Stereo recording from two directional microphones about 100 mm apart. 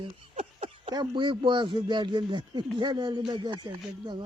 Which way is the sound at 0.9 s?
50° right (ahead or behind).